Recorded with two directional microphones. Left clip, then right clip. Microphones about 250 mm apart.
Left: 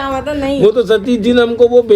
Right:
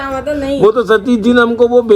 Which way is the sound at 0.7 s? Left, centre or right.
Centre.